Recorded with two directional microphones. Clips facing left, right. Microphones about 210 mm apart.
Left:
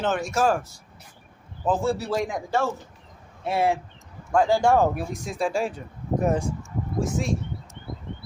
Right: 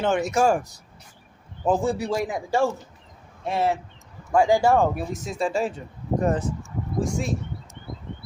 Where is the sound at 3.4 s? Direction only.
10° left (ahead or behind).